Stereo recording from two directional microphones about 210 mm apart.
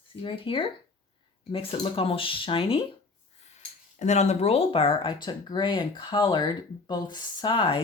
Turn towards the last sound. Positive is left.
turn(degrees=20)  # may be behind; listen again after turning